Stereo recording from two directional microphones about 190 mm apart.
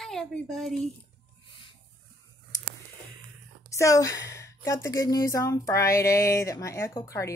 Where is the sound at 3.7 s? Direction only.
15° left (ahead or behind).